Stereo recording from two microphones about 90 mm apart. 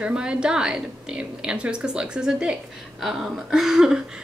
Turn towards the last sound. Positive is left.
turn(degrees=-5)  # may be behind; listen again after turning